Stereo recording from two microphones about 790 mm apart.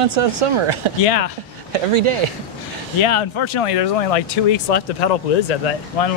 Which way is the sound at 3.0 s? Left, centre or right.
Left.